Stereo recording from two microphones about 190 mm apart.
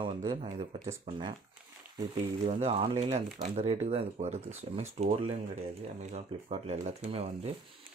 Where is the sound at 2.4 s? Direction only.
30° right (ahead or behind).